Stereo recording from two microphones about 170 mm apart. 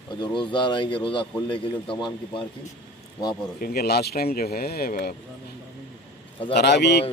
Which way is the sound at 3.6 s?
65° left (ahead or behind).